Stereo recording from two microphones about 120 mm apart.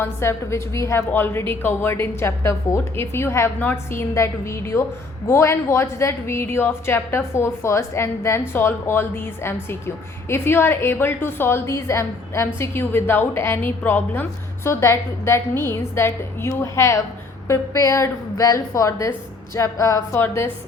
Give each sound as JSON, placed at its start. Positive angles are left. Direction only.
{"t": 0.0, "sound": "a woman's voice", "side_deg": 20}